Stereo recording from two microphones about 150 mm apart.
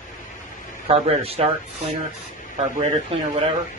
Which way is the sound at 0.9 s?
40° right (ahead or behind).